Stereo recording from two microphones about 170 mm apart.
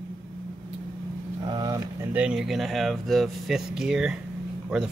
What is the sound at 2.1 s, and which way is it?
Speech, 5° right (ahead or behind).